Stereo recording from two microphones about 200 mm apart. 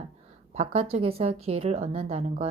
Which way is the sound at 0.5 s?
30° right (ahead or behind).